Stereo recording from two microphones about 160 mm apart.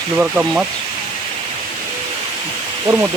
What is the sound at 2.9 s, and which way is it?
Speech, 25° right (ahead or behind).